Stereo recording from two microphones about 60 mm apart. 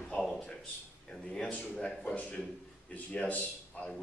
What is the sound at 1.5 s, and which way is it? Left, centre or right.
A man's voice, centre.